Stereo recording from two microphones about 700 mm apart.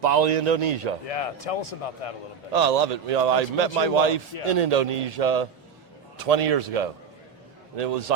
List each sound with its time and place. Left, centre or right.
0.0 s a man's voice: right
1.0 s speech: left
2.5 s a man's voice: right